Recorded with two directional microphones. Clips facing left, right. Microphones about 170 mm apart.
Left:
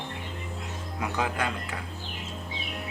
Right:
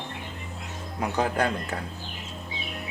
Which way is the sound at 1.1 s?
35° right (ahead or behind).